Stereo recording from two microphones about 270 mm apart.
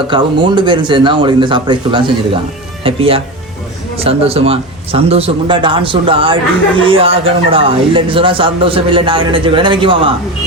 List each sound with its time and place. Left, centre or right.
0.1 s speech: centre